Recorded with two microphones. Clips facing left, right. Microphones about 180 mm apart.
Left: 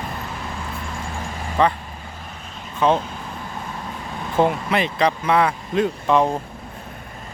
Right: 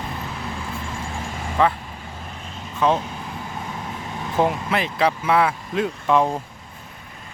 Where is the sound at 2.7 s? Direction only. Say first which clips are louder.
Left 1 dB; centre (ahead or behind).